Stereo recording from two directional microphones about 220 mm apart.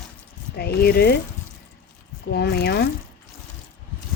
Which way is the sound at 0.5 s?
45° left (ahead or behind).